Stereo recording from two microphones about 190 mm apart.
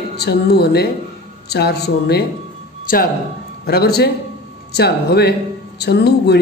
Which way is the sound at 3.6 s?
55° left (ahead or behind).